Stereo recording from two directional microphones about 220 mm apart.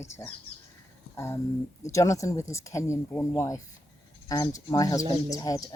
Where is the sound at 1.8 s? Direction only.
15° left (ahead or behind).